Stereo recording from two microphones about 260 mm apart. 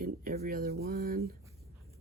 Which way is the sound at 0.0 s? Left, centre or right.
Right.